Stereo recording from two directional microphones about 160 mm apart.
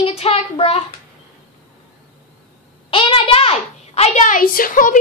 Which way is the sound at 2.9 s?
35° left (ahead or behind).